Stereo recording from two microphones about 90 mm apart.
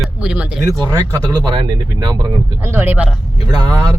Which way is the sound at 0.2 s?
10° right (ahead or behind).